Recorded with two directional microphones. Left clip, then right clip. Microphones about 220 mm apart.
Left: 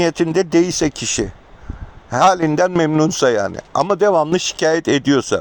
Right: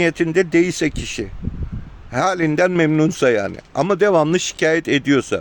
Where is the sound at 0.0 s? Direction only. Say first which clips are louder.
Left 1 dB; 10° left (ahead or behind).